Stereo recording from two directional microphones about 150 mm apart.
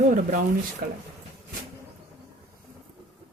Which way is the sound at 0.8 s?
90° right.